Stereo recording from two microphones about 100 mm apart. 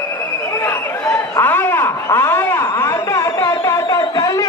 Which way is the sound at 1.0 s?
30° left (ahead or behind).